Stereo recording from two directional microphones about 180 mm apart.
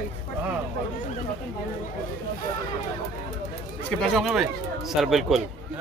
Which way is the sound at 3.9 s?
Centre (ahead or behind).